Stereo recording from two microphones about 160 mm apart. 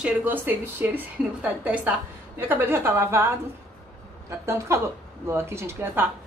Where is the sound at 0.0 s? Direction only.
10° right (ahead or behind).